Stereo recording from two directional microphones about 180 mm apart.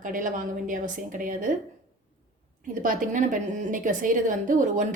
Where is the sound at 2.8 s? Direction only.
45° right (ahead or behind).